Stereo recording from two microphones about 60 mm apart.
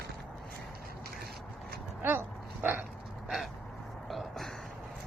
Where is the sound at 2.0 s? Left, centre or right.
Right.